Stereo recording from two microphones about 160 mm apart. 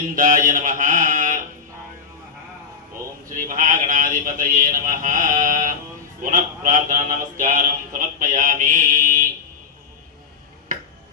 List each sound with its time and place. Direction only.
0.1 s speech: 55° right (ahead or behind)
3.3 s speech: 55° right (ahead or behind)